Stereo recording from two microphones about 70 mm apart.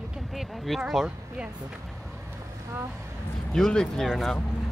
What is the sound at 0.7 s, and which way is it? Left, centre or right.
Speech, centre.